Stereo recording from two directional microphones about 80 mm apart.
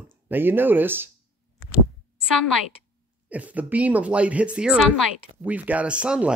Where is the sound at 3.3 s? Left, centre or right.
Centre.